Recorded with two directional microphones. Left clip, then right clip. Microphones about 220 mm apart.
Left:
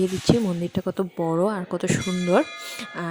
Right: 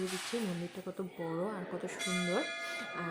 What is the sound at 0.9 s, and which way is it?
Speech, 45° left (ahead or behind).